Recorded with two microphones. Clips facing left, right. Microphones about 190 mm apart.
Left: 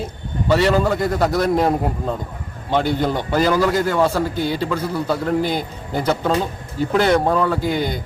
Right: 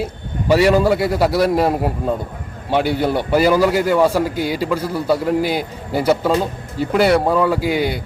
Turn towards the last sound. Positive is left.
turn(degrees=-10)  # may be behind; listen again after turning